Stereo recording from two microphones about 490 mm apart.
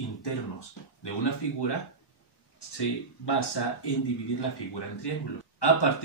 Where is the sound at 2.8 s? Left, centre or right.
Left.